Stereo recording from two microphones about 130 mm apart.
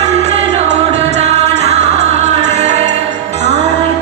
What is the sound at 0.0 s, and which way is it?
Music, 60° right (ahead or behind).